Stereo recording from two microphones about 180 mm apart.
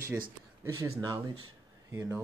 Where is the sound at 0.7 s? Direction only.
20° right (ahead or behind).